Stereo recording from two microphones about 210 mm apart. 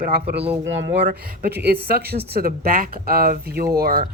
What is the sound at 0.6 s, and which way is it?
Speech, 60° right (ahead or behind).